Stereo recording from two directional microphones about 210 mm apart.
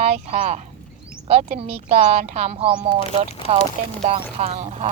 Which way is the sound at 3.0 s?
30° left (ahead or behind).